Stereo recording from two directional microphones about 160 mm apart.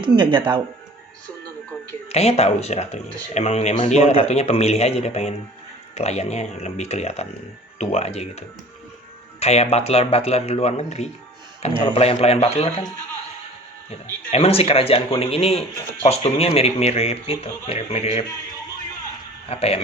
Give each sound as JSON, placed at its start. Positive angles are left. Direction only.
{"t": 0.0, "sound": "speech", "side_deg": -30}
{"t": 2.0, "sound": "speech", "side_deg": 40}
{"t": 14.3, "sound": "speech", "side_deg": 35}
{"t": 19.5, "sound": "speech", "side_deg": 40}